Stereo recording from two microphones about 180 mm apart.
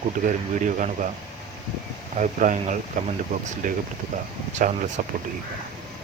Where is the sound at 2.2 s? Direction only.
45° right (ahead or behind).